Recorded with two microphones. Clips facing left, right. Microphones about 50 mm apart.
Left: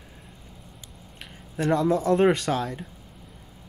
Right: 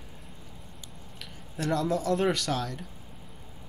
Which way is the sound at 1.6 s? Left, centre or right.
Left.